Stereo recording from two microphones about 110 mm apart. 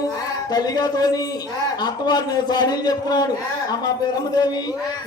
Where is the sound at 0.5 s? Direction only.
35° left (ahead or behind).